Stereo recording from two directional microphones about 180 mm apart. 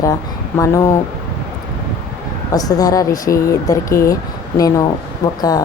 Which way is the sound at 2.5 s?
20° left (ahead or behind).